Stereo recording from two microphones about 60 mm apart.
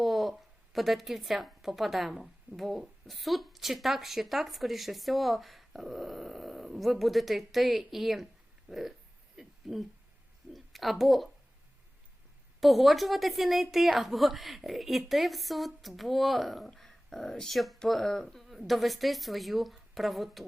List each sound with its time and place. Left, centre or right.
0.0 s a woman's voice: centre
8.7 s a sound: centre
12.5 s a woman's voice: centre